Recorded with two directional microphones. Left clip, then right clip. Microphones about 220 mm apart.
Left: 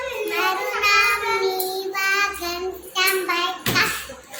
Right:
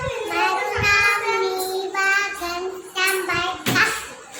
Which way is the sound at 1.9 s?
5° right (ahead or behind).